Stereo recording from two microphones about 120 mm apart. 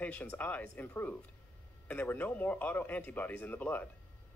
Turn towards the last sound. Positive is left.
turn(degrees=15)  # may be behind; listen again after turning